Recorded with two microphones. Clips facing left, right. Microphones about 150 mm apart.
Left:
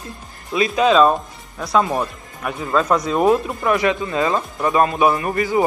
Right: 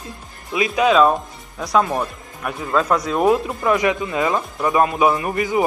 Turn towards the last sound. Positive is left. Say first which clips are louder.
# left 1 dB
turn(degrees=-20)  # may be behind; listen again after turning